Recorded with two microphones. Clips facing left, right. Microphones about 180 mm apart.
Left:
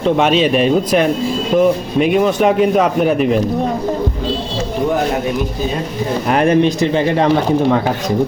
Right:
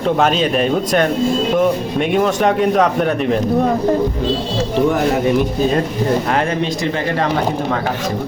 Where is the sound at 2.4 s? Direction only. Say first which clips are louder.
Left 1 dB; 5° left (ahead or behind).